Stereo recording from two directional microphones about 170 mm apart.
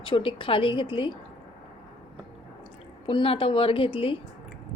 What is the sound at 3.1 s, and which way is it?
A woman's voice, 30° left (ahead or behind).